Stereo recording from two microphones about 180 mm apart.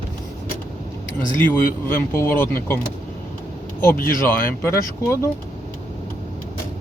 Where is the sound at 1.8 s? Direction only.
10° left (ahead or behind).